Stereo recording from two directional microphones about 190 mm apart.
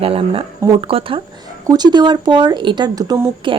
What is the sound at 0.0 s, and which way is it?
Speech, 30° right (ahead or behind).